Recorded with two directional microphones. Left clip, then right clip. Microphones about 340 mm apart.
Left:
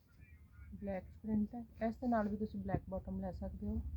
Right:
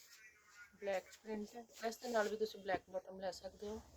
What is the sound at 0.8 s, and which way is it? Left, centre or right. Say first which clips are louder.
A woman's voice: right 2 dB; centre.